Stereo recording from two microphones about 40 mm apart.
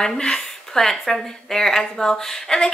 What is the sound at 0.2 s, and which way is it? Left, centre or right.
Speech, centre.